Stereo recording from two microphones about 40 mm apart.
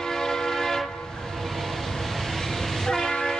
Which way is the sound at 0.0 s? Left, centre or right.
Centre.